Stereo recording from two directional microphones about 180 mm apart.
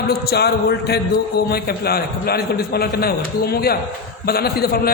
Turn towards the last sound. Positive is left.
turn(degrees=55)  # may be behind; listen again after turning